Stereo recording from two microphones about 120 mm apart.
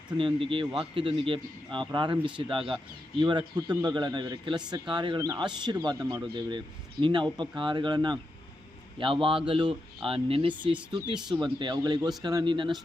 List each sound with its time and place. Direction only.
0.2 s speech: 50° right (ahead or behind)